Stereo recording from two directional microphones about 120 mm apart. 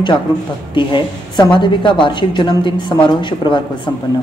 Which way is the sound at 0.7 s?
40° left (ahead or behind).